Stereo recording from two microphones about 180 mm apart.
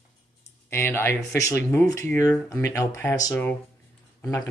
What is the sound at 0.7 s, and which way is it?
Speech, 15° left (ahead or behind).